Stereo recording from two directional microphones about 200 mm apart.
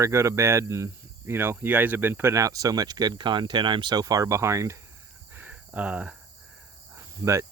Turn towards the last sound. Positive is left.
turn(degrees=-15)  # may be behind; listen again after turning